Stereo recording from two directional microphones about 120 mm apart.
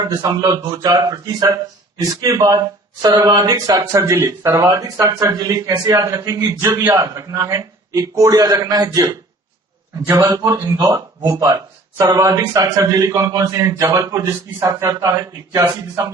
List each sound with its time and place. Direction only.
0.0 s a man's voice: 30° right (ahead or behind)
10.1 s a man's voice: 20° right (ahead or behind)
10.5 s a man's voice: 30° right (ahead or behind)